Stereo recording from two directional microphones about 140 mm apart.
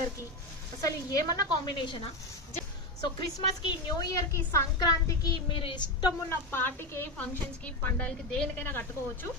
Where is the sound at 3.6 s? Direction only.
30° left (ahead or behind).